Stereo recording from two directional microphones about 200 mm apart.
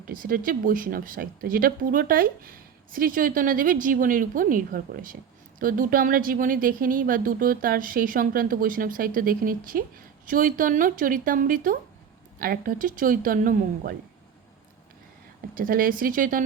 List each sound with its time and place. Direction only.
0.1 s a woman's voice: 45° right (ahead or behind)
15.5 s a woman's voice: 45° right (ahead or behind)